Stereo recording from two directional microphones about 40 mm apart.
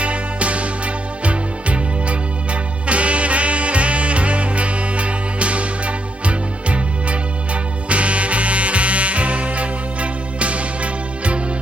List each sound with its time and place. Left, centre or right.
0.0 s music: right